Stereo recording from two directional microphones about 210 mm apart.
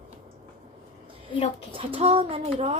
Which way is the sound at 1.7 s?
25° right (ahead or behind).